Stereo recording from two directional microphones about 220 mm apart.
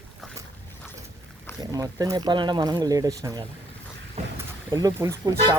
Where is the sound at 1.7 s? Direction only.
15° right (ahead or behind).